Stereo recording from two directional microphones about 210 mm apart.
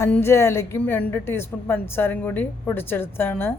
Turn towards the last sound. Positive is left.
turn(degrees=10)  # may be behind; listen again after turning